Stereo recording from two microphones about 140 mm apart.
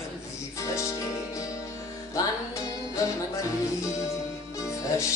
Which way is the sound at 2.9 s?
25° left (ahead or behind).